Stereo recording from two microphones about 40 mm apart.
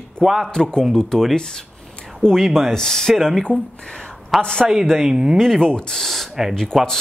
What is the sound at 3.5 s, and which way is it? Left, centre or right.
Speech, right.